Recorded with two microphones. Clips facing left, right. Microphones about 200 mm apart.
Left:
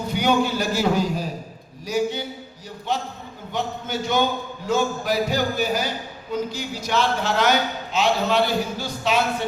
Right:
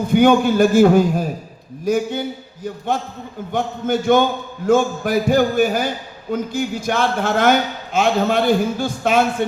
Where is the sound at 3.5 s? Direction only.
50° right (ahead or behind).